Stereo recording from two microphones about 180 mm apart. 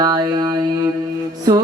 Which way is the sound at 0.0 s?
20° right (ahead or behind).